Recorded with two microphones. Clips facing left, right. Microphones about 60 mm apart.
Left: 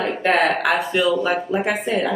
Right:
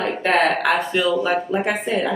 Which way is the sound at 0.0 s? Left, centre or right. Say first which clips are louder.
Even; centre.